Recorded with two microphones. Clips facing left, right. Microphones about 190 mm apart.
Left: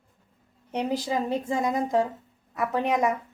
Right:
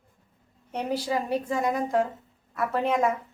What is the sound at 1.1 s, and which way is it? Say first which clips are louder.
A woman's voice: even; 20° left (ahead or behind).